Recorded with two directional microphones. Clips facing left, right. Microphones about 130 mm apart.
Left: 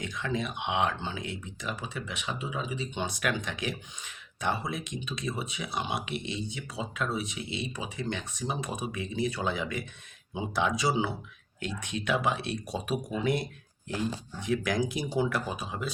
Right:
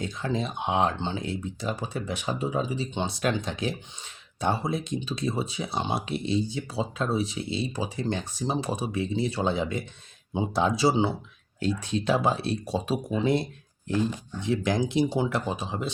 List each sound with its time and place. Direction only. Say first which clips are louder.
0.0 s speech: right 3 dB; 30° right (ahead or behind)